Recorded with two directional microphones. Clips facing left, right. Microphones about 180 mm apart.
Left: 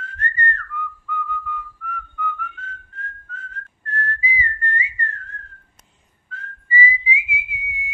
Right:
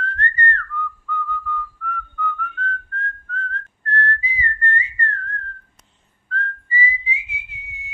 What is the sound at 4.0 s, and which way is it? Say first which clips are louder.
Whistling: right 1 dB; 10° left (ahead or behind).